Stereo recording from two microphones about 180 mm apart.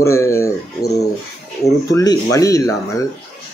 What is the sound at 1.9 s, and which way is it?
Speech, 20° left (ahead or behind).